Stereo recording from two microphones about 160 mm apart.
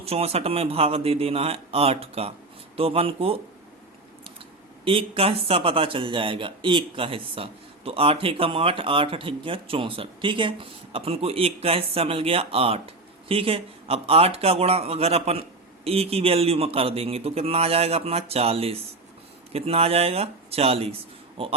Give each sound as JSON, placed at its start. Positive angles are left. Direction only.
{"t": 0.0, "sound": "speech", "side_deg": -40}
{"t": 4.9, "sound": "speech", "side_deg": -35}